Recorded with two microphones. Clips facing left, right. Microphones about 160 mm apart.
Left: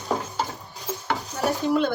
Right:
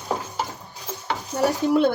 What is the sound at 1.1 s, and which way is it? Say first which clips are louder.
Dishes: right 3 dB; centre (ahead or behind).